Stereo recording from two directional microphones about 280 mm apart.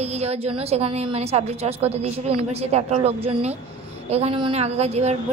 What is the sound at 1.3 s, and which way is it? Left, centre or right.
A woman's voice, right.